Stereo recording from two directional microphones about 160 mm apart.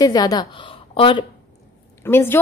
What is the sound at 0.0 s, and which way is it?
A woman's voice, 25° left (ahead or behind).